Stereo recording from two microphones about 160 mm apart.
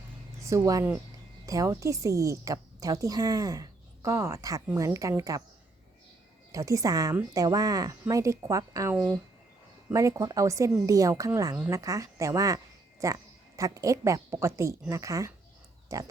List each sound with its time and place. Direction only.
0.4 s a woman's voice: 20° right (ahead or behind)
6.5 s a woman's voice: 20° right (ahead or behind)